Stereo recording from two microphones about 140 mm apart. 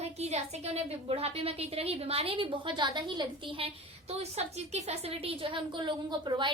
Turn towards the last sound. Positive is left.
turn(degrees=-35)  # may be behind; listen again after turning